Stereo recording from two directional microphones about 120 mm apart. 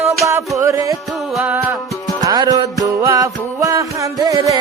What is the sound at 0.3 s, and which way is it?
Music, 25° right (ahead or behind).